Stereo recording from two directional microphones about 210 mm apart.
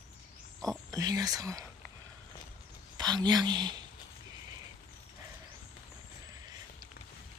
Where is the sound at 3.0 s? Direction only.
20° right (ahead or behind).